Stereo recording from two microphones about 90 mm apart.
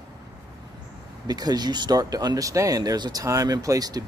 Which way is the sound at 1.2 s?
50° right (ahead or behind).